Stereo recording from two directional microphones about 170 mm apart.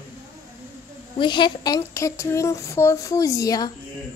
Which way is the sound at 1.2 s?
30° left (ahead or behind).